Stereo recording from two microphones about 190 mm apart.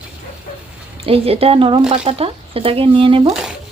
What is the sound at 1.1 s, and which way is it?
Speech, 30° right (ahead or behind).